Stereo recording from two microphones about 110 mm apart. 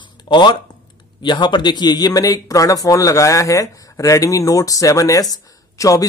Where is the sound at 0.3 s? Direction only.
45° left (ahead or behind).